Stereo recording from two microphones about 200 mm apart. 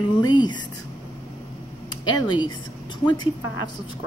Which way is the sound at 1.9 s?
25° left (ahead or behind).